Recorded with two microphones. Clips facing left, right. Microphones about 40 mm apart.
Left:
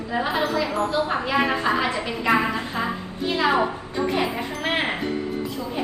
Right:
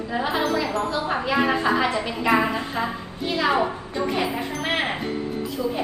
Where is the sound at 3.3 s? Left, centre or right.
Centre.